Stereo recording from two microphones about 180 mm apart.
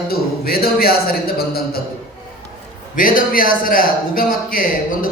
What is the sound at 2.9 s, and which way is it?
A man's voice, 50° left (ahead or behind).